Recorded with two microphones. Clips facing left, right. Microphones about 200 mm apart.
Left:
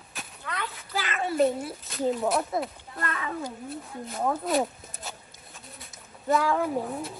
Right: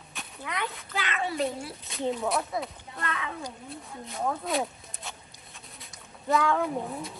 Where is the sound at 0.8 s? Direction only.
Centre (ahead or behind).